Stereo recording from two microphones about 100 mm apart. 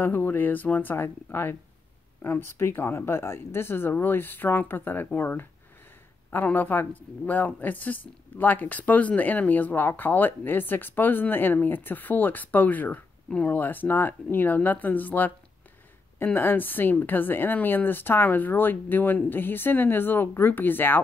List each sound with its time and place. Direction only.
0.0 s a woman's voice: 20° left (ahead or behind)
16.3 s a woman's voice: 20° left (ahead or behind)